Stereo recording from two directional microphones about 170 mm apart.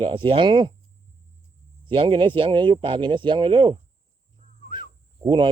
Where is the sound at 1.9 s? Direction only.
30° right (ahead or behind).